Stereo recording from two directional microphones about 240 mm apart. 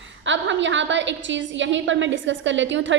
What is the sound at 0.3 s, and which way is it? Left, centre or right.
A woman's voice, right.